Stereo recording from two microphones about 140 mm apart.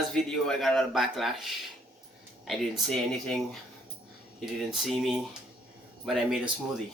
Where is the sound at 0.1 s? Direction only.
5° left (ahead or behind).